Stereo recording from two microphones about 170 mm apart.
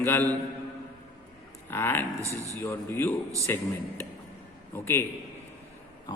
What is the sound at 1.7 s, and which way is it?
Speech, 15° left (ahead or behind).